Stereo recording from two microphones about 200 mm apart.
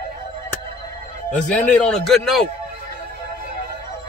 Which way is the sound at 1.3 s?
5° left (ahead or behind).